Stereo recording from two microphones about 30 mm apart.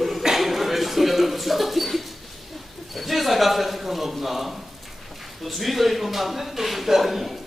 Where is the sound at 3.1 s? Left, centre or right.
Centre.